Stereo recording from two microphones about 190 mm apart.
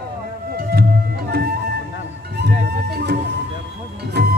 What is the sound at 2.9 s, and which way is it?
Music, 55° right (ahead or behind).